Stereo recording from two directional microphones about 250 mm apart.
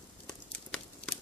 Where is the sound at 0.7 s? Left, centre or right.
Centre.